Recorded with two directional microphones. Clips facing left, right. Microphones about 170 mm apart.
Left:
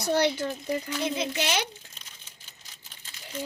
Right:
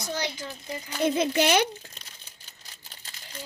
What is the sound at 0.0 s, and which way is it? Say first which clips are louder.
Speech: left 8 dB; 60° left (ahead or behind).